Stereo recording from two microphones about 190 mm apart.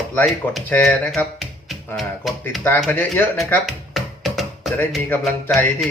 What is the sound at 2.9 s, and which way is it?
Speech, 10° left (ahead or behind).